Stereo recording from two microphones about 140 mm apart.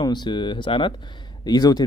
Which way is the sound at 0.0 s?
30° left (ahead or behind).